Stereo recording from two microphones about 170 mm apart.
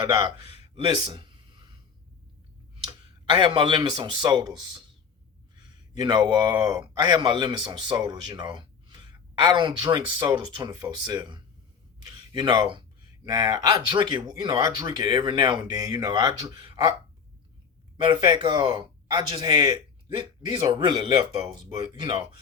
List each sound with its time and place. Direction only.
0.0 s a sound: 25° right (ahead or behind)
3.2 s a man's voice: 30° right (ahead or behind)
17.9 s speech: 30° right (ahead or behind)